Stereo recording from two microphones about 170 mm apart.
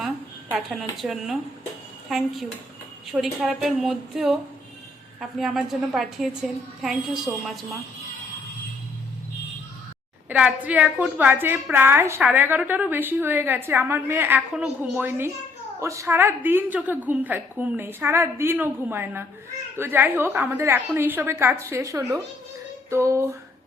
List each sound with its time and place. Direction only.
0.5 s a woman's voice: centre (ahead or behind)
10.2 s a woman's voice: 10° right (ahead or behind)